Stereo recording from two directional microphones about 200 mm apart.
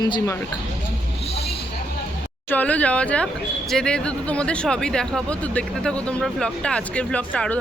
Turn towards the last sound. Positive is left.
turn(degrees=5)  # may be behind; listen again after turning